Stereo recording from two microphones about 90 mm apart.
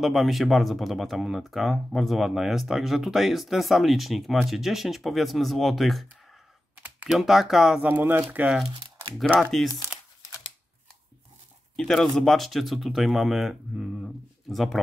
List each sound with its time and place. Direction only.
0.0 s speech: centre (ahead or behind)
7.1 s speech: 5° right (ahead or behind)
7.8 s speech: 20° right (ahead or behind)
9.4 s speech: centre (ahead or behind)
9.9 s crumpling: 5° right (ahead or behind)
11.7 s speech: 5° left (ahead or behind)